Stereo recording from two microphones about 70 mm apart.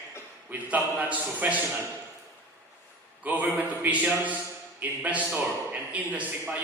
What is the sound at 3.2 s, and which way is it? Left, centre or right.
A man's voice, right.